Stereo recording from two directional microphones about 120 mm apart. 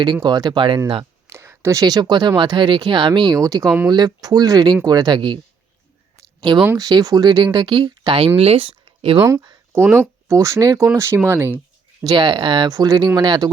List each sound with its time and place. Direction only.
0.0 s speech: 40° right (ahead or behind)
1.3 s speech: 20° right (ahead or behind); by 5.4 s 40° right (ahead or behind)
6.1 s a sound: 35° right (ahead or behind)
6.7 s speech: 30° right (ahead or behind); by 9.1 s 50° right (ahead or behind)
9.1 s speech: 25° right (ahead or behind)
9.7 s speech: 20° right (ahead or behind)
12.0 s speech: 40° right (ahead or behind)